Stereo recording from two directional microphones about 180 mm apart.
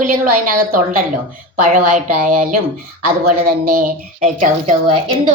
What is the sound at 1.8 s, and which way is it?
Speech, 50° right (ahead or behind).